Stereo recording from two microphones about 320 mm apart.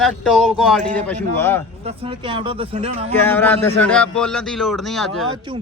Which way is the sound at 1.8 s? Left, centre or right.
Centre.